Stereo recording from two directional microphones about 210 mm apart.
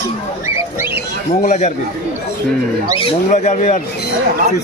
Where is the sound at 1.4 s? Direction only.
35° left (ahead or behind).